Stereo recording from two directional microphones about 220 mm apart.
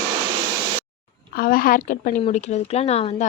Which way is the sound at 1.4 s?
40° left (ahead or behind).